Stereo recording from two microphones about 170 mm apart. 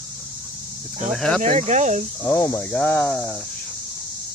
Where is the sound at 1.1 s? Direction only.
5° left (ahead or behind).